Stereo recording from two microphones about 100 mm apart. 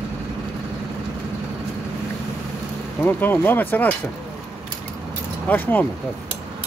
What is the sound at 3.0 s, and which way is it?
Speech, 20° left (ahead or behind).